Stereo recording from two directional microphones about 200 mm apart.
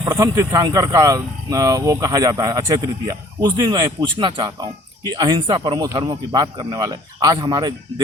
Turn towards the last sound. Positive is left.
turn(degrees=-20)  # may be behind; listen again after turning